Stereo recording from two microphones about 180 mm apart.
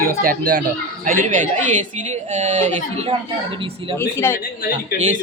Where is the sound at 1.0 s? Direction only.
45° right (ahead or behind).